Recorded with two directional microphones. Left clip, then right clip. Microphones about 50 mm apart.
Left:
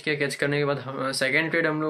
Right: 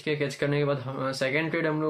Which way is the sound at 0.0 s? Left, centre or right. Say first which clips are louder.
Left 3 dB; right.